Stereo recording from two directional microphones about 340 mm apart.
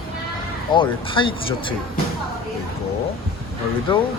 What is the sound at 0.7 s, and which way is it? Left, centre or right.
Speech, centre.